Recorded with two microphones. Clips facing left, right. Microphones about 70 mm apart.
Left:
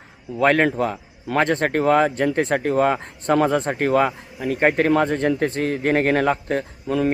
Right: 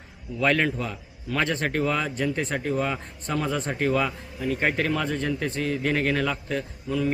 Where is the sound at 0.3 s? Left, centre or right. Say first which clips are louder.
Left 6 dB; left.